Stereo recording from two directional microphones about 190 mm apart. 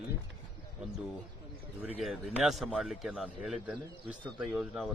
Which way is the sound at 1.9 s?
Centre (ahead or behind).